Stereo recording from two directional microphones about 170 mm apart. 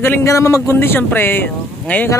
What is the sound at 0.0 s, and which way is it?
Speech, 15° left (ahead or behind).